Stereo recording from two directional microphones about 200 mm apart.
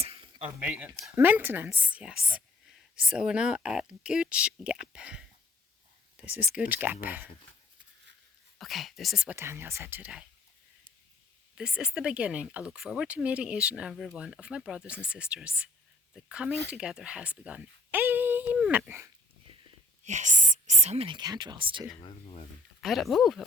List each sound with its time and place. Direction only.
0.0 s a sound: 30° right (ahead or behind)
0.4 s a woman's voice: 5° right (ahead or behind)
6.2 s speech: 5° right (ahead or behind)
8.5 s a woman's voice: centre (ahead or behind)
11.5 s a woman's voice: 5° right (ahead or behind)
20.1 s speech: 35° right (ahead or behind)
22.8 s a woman's voice: centre (ahead or behind)